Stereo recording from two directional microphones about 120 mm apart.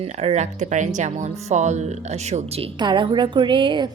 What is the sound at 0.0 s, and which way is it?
Speech, 65° right (ahead or behind).